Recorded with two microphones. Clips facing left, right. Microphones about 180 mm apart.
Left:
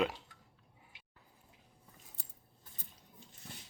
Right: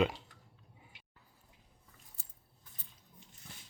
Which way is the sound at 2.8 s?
45° left (ahead or behind).